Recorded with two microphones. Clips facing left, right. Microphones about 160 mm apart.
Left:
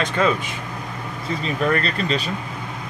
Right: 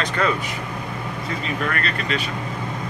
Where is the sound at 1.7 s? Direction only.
30° left (ahead or behind).